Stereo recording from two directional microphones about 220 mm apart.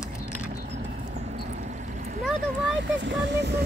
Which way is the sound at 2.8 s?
55° right (ahead or behind).